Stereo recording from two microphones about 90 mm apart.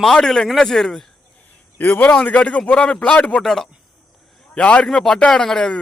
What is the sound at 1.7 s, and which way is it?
A man's voice, 20° left (ahead or behind).